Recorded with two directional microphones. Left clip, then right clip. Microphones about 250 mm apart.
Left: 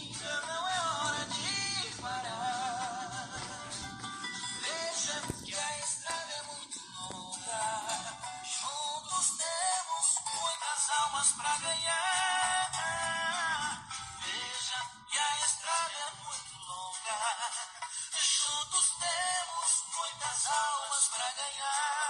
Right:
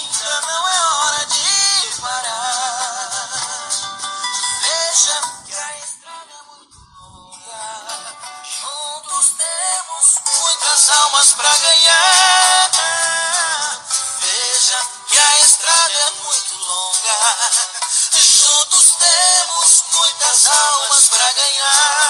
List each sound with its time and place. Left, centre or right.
0.1 s music: right
9.1 s music: right